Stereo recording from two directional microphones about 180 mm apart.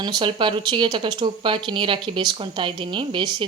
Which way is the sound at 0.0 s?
25° right (ahead or behind).